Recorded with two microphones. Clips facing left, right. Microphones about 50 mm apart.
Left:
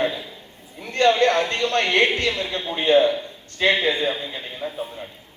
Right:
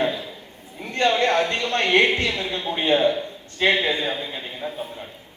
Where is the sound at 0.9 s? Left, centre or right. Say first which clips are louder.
Left 2 dB; right.